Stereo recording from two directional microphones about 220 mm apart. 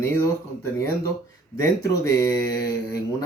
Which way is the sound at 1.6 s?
15° left (ahead or behind).